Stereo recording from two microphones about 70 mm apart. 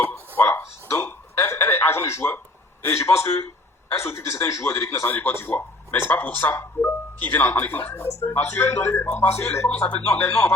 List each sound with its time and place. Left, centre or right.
0.3 s a sound: left
3.0 s a man's voice: left
9.6 s speech: centre
10.2 s a man's voice: left